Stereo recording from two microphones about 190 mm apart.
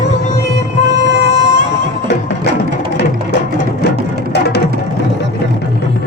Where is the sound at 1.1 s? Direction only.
75° right (ahead or behind).